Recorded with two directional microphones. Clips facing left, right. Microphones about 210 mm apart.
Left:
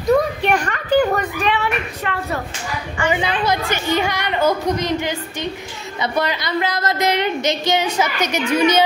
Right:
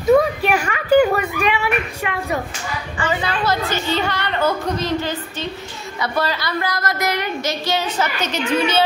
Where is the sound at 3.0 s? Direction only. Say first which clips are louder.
Left 2 dB; 15° left (ahead or behind).